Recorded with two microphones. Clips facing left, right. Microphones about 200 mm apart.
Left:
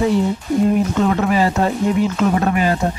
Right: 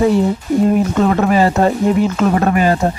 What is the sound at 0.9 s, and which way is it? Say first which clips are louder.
Speech: right 3 dB; 50° right (ahead or behind).